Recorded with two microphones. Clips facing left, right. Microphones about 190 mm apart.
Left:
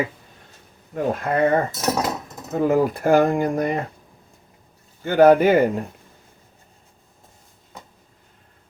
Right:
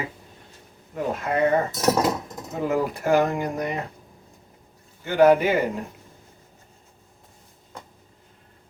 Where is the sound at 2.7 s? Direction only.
50° left (ahead or behind).